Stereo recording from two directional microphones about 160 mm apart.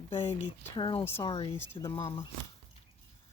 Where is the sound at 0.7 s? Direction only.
30° left (ahead or behind).